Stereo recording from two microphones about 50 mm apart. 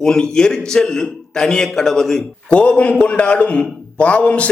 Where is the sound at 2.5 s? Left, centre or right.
Left.